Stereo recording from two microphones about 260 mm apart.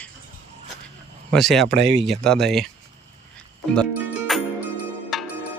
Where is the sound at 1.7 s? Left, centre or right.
Right.